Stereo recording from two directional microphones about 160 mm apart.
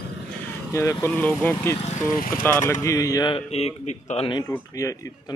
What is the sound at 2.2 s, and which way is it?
Speech, 60° left (ahead or behind).